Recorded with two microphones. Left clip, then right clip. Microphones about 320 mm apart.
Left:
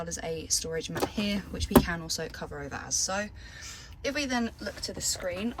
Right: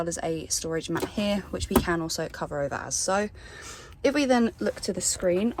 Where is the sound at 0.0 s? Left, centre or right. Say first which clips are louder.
Right 6 dB; centre.